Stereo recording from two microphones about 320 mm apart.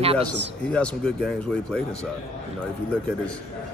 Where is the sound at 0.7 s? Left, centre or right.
Centre.